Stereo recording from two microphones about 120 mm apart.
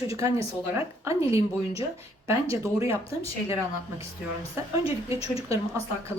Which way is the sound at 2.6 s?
25° right (ahead or behind).